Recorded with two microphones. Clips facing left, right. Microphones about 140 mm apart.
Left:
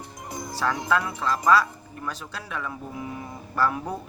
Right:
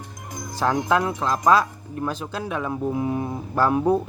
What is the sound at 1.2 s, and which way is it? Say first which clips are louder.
Speech: even; 20° right (ahead or behind).